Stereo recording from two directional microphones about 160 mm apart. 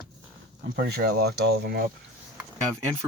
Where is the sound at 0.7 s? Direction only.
80° right.